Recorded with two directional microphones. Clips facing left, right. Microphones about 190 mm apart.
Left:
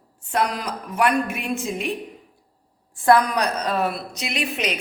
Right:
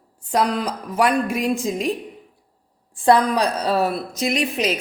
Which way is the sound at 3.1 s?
25° right (ahead or behind).